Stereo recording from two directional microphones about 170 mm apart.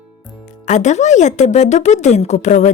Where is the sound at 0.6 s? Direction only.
45° left (ahead or behind).